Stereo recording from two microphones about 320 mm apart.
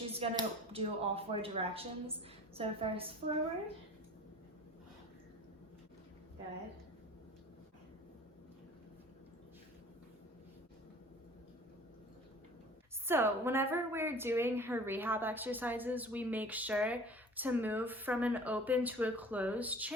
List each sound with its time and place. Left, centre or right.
0.1 s speech: centre
13.1 s a woman's voice: centre